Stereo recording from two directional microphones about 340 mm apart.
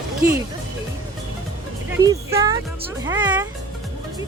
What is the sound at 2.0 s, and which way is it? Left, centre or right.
Speech, centre.